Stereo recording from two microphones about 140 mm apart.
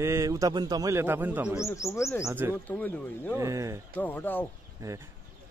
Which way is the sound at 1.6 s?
20° left (ahead or behind).